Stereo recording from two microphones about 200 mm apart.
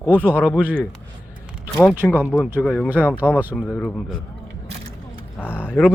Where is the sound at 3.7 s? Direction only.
10° left (ahead or behind).